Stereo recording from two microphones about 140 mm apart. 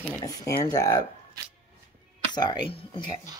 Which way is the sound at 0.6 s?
25° left (ahead or behind).